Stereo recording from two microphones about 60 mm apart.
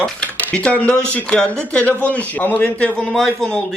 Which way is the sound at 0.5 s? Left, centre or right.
Centre.